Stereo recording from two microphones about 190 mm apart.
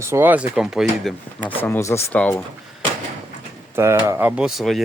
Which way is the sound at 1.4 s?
10° left (ahead or behind).